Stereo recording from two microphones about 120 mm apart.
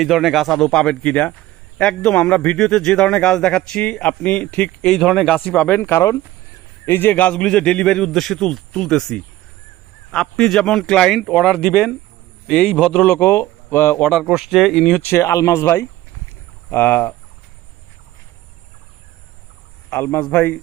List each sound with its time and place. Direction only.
0.0 s a man's voice: centre (ahead or behind)
5.8 s speech: 25° left (ahead or behind)
6.8 s a man's voice: 15° left (ahead or behind)
14.0 s a man's voice: centre (ahead or behind); by 17.2 s 15° left (ahead or behind)
19.9 s a man's voice: 15° left (ahead or behind)